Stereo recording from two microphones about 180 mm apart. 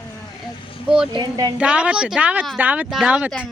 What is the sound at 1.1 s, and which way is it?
Speech, 25° right (ahead or behind).